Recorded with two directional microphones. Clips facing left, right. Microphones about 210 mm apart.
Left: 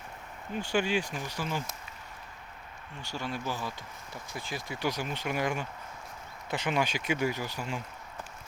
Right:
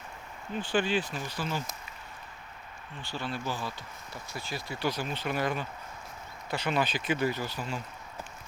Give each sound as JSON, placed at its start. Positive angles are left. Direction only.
{"t": 0.5, "sound": "speech", "side_deg": 10}
{"t": 3.2, "sound": "speech", "side_deg": 15}